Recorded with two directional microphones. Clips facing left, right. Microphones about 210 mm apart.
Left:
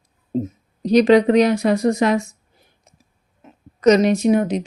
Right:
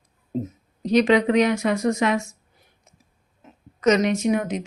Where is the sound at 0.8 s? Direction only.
35° left (ahead or behind).